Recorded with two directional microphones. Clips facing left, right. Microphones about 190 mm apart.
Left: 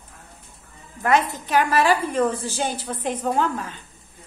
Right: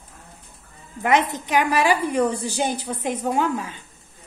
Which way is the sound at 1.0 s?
20° right (ahead or behind).